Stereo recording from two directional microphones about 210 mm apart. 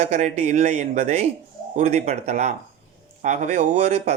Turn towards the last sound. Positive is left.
turn(degrees=-30)  # may be behind; listen again after turning